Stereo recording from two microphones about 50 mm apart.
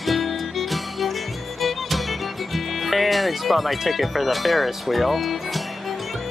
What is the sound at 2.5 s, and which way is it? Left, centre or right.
Speech, centre.